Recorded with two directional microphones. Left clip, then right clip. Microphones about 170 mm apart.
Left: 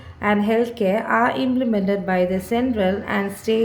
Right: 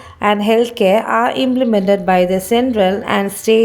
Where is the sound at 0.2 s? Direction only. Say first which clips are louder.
Right 6 dB; 40° right (ahead or behind).